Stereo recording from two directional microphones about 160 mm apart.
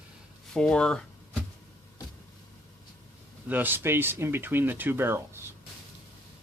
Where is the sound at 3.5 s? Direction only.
10° right (ahead or behind).